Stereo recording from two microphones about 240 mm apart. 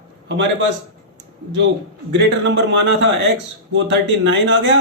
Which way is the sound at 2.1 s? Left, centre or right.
Right.